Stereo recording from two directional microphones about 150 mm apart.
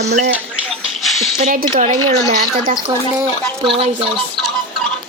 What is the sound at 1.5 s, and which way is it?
Speech, 65° right (ahead or behind).